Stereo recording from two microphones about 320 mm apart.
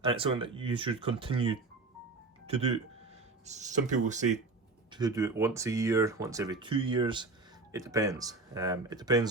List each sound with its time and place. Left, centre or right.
0.0 s speech: centre